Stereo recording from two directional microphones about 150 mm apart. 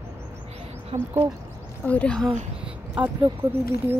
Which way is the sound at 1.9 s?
10° left (ahead or behind).